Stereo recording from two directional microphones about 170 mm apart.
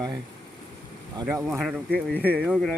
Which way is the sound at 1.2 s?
15° right (ahead or behind).